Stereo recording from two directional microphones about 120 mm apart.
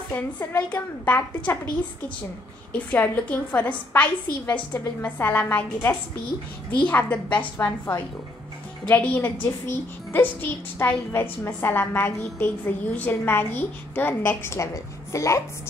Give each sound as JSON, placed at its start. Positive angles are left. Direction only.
{"t": 0.1, "sound": "a woman's voice", "side_deg": 20}
{"t": 2.7, "sound": "a woman's voice", "side_deg": 15}